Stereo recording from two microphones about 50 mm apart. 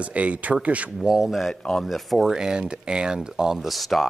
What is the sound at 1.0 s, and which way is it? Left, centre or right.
Speech, centre.